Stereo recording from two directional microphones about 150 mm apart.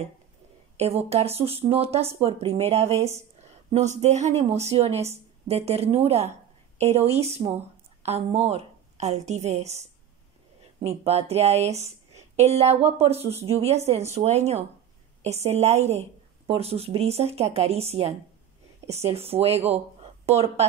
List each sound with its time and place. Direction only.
0.7 s a woman's voice: 45° right (ahead or behind)